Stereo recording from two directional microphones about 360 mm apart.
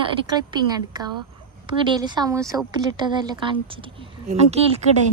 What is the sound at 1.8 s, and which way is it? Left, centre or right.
A woman's voice, centre.